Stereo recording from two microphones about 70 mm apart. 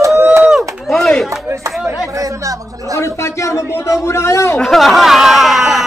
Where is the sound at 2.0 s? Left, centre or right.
Right.